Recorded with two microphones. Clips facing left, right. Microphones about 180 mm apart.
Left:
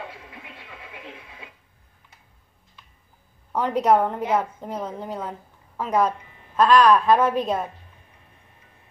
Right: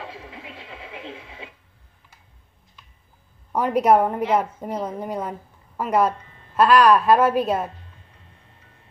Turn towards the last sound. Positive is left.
turn(degrees=-5)  # may be behind; listen again after turning